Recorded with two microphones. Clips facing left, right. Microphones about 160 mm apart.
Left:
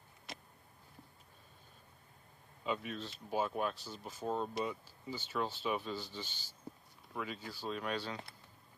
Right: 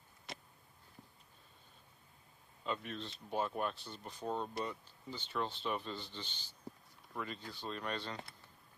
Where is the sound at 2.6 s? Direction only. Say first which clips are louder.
Left 2 dB; 5° left (ahead or behind).